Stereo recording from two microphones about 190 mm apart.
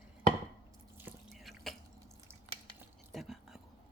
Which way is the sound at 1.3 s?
Centre (ahead or behind).